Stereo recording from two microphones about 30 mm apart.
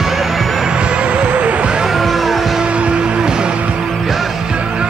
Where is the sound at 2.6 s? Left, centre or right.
Right.